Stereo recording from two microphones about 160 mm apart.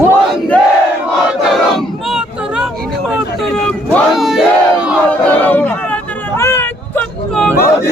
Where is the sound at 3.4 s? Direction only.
5° left (ahead or behind).